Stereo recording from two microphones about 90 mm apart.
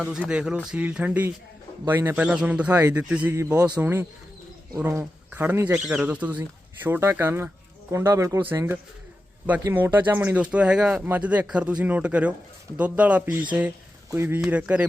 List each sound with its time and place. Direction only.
0.0 s speech: 10° right (ahead or behind); by 5.8 s 25° right (ahead or behind)
5.8 s speech: 5° right (ahead or behind)
13.7 s speech: 30° right (ahead or behind)
14.5 s speech: 15° right (ahead or behind)